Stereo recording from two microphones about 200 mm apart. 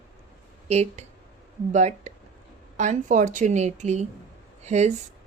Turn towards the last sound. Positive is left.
turn(degrees=-35)  # may be behind; listen again after turning